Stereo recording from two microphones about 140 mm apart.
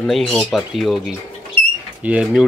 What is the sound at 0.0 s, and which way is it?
Speech, 5° left (ahead or behind).